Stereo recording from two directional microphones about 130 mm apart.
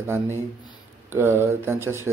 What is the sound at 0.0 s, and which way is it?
A man's voice, 20° right (ahead or behind).